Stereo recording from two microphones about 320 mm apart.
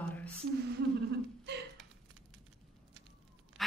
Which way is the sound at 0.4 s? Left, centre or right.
Right.